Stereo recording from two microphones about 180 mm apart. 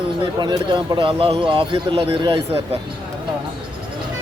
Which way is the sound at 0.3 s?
25° right (ahead or behind).